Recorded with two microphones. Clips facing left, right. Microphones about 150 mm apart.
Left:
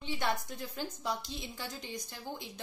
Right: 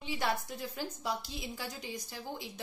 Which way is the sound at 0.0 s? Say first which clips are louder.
Even; 5° right (ahead or behind).